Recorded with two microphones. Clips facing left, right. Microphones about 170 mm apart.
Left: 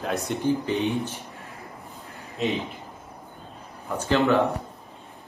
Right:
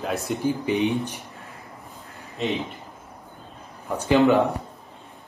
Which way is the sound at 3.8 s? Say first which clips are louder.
Right 4 dB; 15° right (ahead or behind).